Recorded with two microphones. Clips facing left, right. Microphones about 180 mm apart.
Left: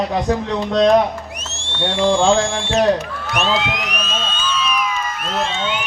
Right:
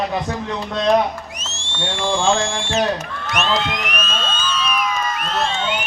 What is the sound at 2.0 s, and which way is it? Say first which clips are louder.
Music: left 4 dB; 60° left (ahead or behind).